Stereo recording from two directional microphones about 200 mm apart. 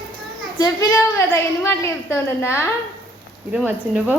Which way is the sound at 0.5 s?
15° left (ahead or behind).